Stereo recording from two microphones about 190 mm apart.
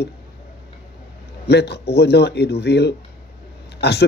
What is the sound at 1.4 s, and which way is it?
Speech, 60° left (ahead or behind).